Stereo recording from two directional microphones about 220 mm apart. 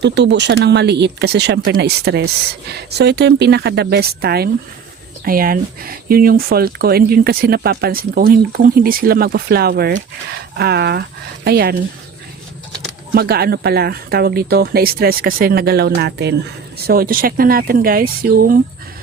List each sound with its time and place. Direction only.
0.0 s speech: 50° right (ahead or behind)
13.1 s speech: 45° right (ahead or behind)